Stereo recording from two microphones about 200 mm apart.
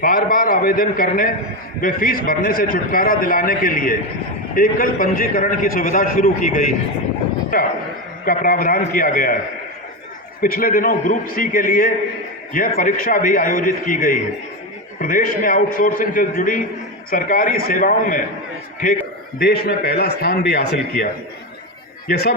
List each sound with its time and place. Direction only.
0.0 s a man's voice: 45° left (ahead or behind)
10.4 s a man's voice: 45° left (ahead or behind)
22.1 s a man's voice: 55° left (ahead or behind)